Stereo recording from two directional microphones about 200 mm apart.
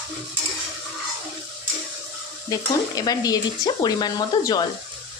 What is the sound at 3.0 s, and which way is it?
Speech, 20° left (ahead or behind).